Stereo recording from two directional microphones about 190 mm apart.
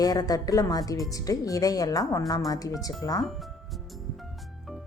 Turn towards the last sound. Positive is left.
turn(degrees=0)  # may be behind; listen again after turning